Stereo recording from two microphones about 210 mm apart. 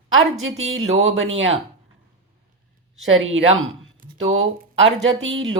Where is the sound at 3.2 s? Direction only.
70° right (ahead or behind).